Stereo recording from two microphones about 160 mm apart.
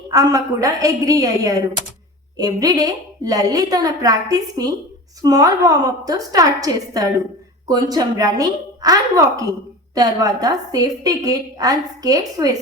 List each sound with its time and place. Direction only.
0.1 s a woman's voice: 20° right (ahead or behind)